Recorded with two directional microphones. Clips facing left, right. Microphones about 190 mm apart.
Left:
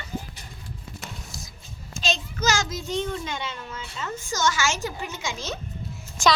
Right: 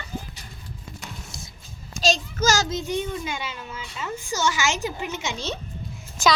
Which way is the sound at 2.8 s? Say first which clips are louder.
Right 1 dB; 10° right (ahead or behind).